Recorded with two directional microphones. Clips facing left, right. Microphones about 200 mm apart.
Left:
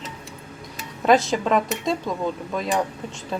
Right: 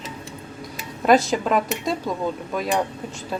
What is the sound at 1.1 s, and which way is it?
Speech, centre (ahead or behind).